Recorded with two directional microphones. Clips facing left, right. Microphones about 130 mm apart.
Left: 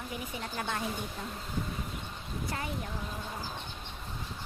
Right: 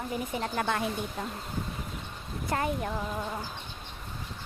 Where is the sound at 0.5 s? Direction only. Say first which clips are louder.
Right 5 dB; 90° right.